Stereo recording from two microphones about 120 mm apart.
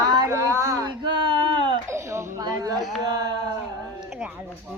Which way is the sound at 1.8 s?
25° right (ahead or behind).